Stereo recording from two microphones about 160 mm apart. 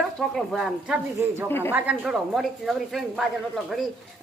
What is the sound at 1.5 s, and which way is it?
Speech, 15° left (ahead or behind).